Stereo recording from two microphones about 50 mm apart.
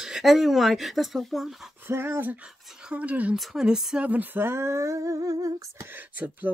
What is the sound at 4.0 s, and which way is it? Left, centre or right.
Speech, right.